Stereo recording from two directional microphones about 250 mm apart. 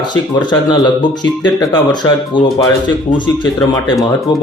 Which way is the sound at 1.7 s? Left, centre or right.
Centre.